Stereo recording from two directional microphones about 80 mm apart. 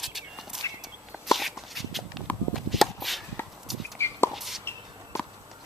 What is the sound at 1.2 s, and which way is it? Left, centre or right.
Walk, centre.